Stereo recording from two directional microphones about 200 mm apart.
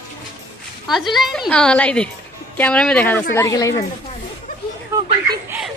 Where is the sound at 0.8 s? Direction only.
Centre (ahead or behind); by 3.7 s 15° left (ahead or behind).